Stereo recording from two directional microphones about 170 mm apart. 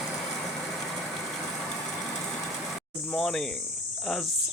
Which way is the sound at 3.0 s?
Centre (ahead or behind).